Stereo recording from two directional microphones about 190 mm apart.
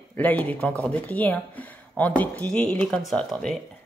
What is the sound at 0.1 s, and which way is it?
Speech, 10° left (ahead or behind).